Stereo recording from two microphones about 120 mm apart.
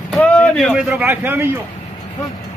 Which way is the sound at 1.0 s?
15° right (ahead or behind).